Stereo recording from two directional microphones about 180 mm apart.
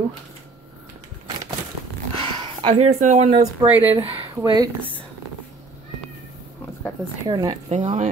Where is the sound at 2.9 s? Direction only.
40° right (ahead or behind).